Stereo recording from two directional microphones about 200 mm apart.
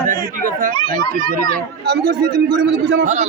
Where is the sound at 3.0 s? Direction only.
35° right (ahead or behind).